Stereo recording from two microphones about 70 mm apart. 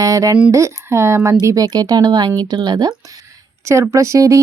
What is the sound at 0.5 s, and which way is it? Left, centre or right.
Speech, right.